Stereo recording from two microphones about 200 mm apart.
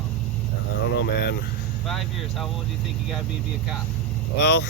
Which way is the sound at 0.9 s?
55° left (ahead or behind).